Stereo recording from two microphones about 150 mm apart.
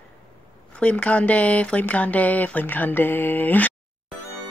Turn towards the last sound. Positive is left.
turn(degrees=10)  # may be behind; listen again after turning